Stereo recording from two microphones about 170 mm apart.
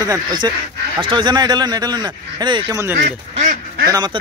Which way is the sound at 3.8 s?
20° right (ahead or behind).